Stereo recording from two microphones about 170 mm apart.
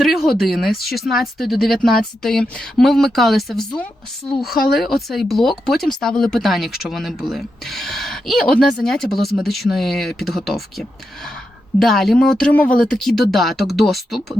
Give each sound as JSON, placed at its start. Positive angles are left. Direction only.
{"t": 0.0, "sound": "speech", "side_deg": 0}
{"t": 4.4, "sound": "speech", "side_deg": 65}
{"t": 4.8, "sound": "speech", "side_deg": 0}